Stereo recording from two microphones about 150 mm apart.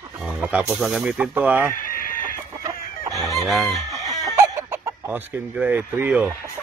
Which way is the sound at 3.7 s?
25° right (ahead or behind).